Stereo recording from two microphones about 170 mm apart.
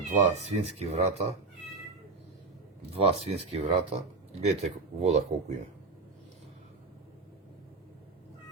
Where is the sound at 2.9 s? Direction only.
35° right (ahead or behind).